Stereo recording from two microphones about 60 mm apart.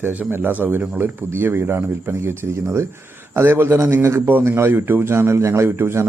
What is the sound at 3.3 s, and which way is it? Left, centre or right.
A man's voice, right.